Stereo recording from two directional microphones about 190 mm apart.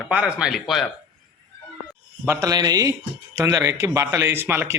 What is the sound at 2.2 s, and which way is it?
A man's voice, 15° right (ahead or behind).